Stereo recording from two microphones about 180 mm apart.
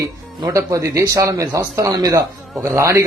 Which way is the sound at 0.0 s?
15° right (ahead or behind).